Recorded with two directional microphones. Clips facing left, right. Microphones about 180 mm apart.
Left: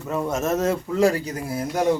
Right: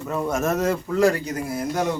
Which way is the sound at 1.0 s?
30° left (ahead or behind).